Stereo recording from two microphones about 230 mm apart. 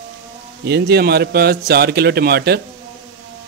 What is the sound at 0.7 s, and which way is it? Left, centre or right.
A man's voice, right.